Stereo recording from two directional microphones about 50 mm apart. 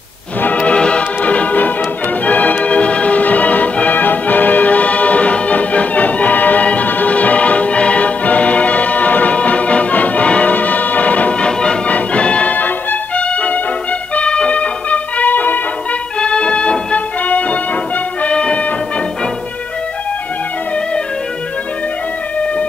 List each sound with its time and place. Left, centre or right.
0.4 s music: left
16.2 s music: left